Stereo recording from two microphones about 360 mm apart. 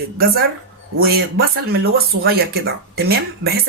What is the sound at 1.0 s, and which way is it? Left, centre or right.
Speech, right.